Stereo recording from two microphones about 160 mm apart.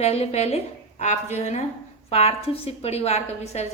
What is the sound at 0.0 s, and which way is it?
A woman's voice, 40° left (ahead or behind).